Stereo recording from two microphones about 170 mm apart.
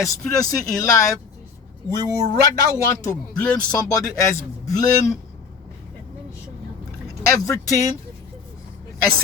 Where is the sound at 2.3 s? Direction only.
15° left (ahead or behind).